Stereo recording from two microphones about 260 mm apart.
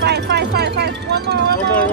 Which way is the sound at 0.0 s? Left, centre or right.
Right.